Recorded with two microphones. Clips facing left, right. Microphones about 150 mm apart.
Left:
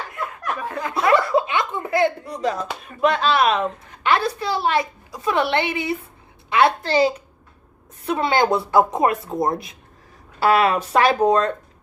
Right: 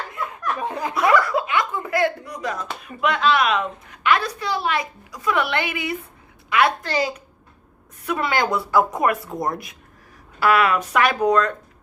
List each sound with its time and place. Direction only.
0.6 s chuckle: 20° right (ahead or behind)
1.1 s speech: 25° left (ahead or behind)